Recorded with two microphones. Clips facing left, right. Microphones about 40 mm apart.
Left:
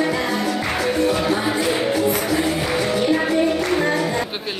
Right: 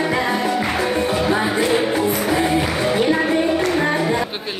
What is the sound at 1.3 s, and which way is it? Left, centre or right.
Music, centre.